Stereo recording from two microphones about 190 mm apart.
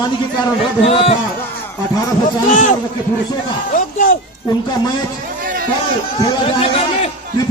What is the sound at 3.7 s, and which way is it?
Speech, 45° left (ahead or behind).